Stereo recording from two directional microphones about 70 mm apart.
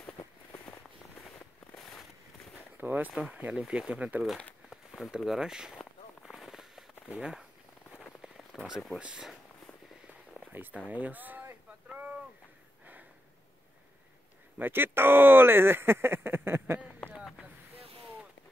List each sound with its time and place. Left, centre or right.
0.2 s a sound: left
2.8 s speech: right
3.5 s speech: centre
3.9 s speech: centre
4.6 s a sound: centre
7.1 s speech: centre
8.2 s rain on surface: centre
9.0 s speech: centre
10.5 s speech: right
11.9 s a sound: right
14.6 s speech: right